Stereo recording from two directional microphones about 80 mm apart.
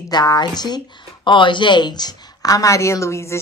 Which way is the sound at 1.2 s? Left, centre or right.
Left.